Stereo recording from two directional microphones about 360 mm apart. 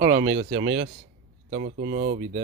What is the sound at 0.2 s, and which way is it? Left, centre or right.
Speech, right.